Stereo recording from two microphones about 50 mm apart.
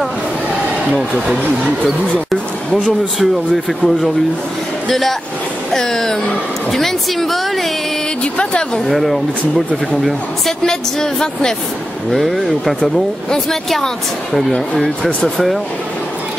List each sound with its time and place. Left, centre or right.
1.1 s speech: centre
2.7 s speech: centre
8.2 s speech: centre
8.8 s speech: centre
10.6 s speech: centre
12.1 s speech: centre